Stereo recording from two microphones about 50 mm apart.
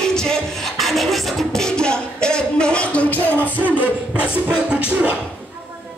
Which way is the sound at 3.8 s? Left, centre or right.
Right.